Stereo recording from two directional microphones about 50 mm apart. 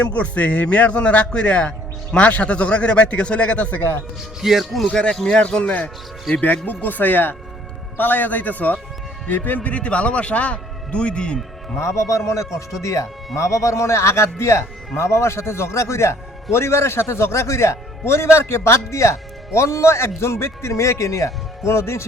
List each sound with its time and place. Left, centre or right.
0.0 s a man's voice: left
4.4 s speech: centre
4.9 s a man's voice: centre
6.3 s a man's voice: left
9.6 s a man's voice: left
11.8 s a man's voice: left
18.0 s speech: left
19.5 s speech: left